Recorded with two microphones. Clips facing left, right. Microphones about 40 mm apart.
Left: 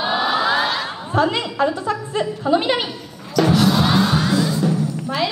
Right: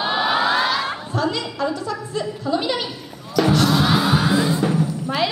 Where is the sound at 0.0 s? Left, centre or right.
Centre.